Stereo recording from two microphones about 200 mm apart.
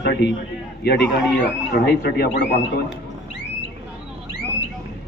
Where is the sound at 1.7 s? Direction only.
50° left (ahead or behind).